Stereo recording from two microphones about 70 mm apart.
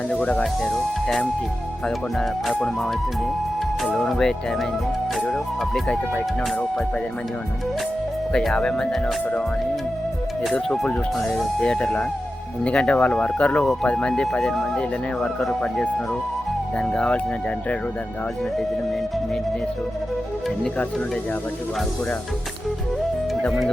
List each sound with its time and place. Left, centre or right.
0.1 s speech: centre
3.9 s speech: centre
8.3 s speech: centre
10.5 s speech: centre
16.7 s speech: centre